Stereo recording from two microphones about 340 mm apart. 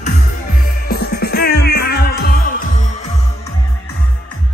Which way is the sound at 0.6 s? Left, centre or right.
Left.